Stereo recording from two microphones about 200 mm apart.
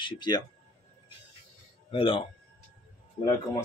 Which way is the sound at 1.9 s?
25° left (ahead or behind).